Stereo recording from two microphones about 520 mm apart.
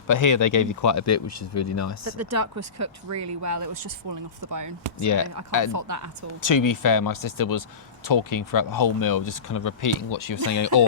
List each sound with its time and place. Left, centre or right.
0.1 s speech: left
2.0 s speech: right
4.9 s speech: left
5.7 s speech: right
6.4 s speech: left